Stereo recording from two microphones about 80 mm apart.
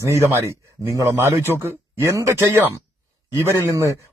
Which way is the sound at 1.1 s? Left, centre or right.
Right.